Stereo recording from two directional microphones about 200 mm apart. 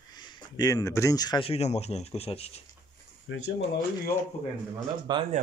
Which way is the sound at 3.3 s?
75° left (ahead or behind).